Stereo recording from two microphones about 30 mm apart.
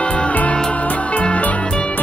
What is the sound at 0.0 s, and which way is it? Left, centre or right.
Music, left.